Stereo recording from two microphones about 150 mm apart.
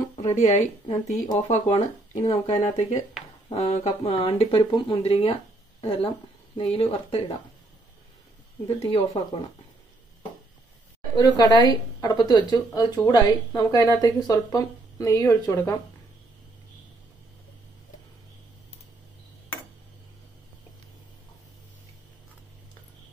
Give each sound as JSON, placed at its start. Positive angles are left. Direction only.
{"t": 0.1, "sound": "speech", "side_deg": 45}
{"t": 6.5, "sound": "speech", "side_deg": 40}
{"t": 8.6, "sound": "speech", "side_deg": 40}
{"t": 11.1, "sound": "a woman's voice", "side_deg": 25}